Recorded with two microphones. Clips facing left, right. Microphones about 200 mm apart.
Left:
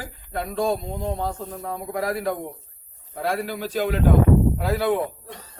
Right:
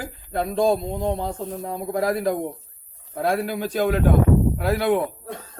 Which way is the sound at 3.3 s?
50° right (ahead or behind).